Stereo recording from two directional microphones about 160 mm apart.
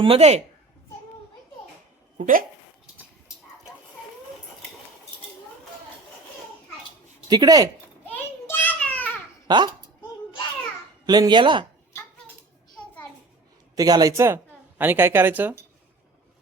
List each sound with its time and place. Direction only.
0.0 s a woman's voice: 40° right (ahead or behind)
2.1 s speech: 55° right (ahead or behind)
7.3 s speech: 25° right (ahead or behind)
8.1 s a sound: 10° left (ahead or behind)
9.5 s speech: 25° right (ahead or behind)
11.0 s speech: 25° right (ahead or behind)
13.7 s a woman's voice: 25° right (ahead or behind)